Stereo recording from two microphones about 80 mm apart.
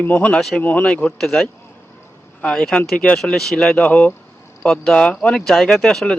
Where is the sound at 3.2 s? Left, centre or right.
Centre.